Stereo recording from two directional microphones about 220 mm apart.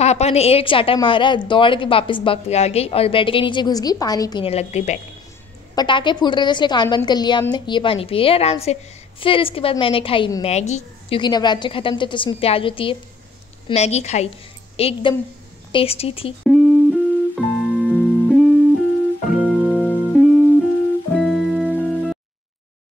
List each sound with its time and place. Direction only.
0.0 s a woman's voice: 30° left (ahead or behind)
5.8 s a woman's voice: 20° left (ahead or behind)
16.4 s music: centre (ahead or behind)